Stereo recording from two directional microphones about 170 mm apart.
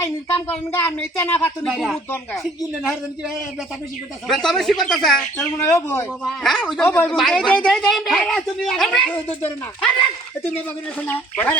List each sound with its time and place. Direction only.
0.0 s a woman's voice: 10° left (ahead or behind)
5.6 s speech: 15° left (ahead or behind)
6.2 s a woman's voice: centre (ahead or behind)
11.0 s speech: 10° left (ahead or behind)